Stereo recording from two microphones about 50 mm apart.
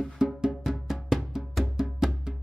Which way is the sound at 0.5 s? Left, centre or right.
Centre.